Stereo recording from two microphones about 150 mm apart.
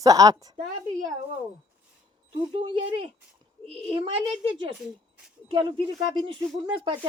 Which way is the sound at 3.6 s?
35° right (ahead or behind).